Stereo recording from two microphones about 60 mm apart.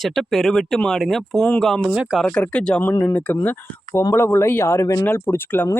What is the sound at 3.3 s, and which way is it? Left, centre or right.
Speech, left.